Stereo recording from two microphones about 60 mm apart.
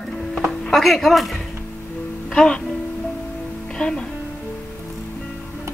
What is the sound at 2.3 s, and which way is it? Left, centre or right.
Speech, centre.